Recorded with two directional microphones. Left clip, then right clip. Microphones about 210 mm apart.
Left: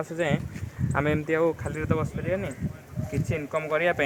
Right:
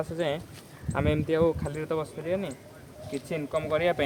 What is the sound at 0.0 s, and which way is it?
Speech, 15° left (ahead or behind).